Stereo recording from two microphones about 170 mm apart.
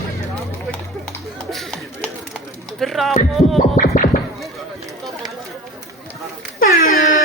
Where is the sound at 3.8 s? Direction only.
55° left (ahead or behind).